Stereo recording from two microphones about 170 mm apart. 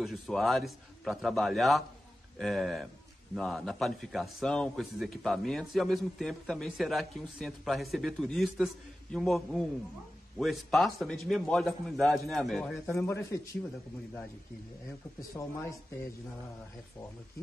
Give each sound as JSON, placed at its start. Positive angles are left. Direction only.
{"t": 0.0, "sound": "a man's voice", "side_deg": 0}
{"t": 12.9, "sound": "a man's voice", "side_deg": 15}
{"t": 15.3, "sound": "a man's voice", "side_deg": 15}